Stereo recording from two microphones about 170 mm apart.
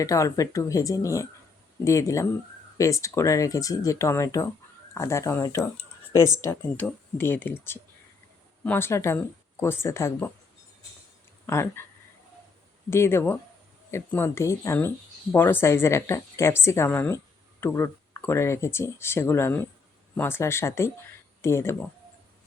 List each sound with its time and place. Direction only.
0.0 s speech: 20° left (ahead or behind)
11.4 s speech: 15° left (ahead or behind)
12.9 s speech: 15° left (ahead or behind)